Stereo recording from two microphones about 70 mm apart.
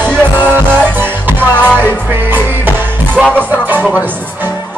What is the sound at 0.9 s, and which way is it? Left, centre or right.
Music, right.